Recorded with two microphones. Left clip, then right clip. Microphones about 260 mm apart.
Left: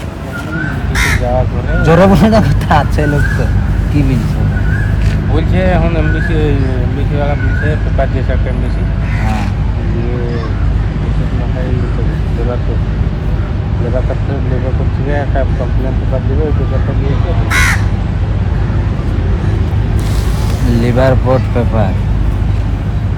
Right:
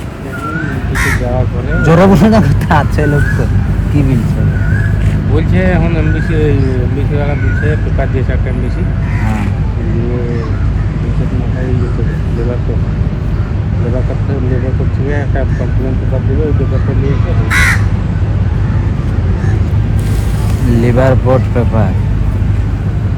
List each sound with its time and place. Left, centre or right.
1.8 s speech: centre
5.4 s speech: centre
17.5 s speech: centre
20.8 s speech: centre